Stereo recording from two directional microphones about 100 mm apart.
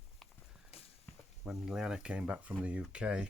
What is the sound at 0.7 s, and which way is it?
Walk, 85° left.